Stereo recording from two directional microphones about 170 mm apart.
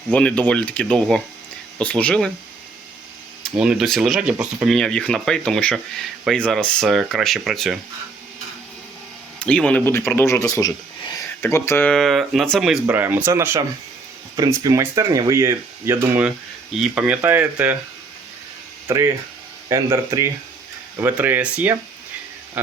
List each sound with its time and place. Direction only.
0.1 s speech: 5° left (ahead or behind)
3.6 s speech: 5° right (ahead or behind)
9.4 s speech: 5° left (ahead or behind)
10.2 s speech: 20° left (ahead or behind)
11.9 s speech: centre (ahead or behind)
18.9 s speech: 15° right (ahead or behind)